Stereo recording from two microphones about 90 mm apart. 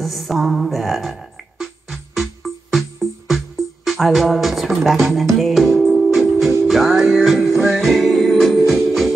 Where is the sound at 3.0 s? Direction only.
Centre (ahead or behind).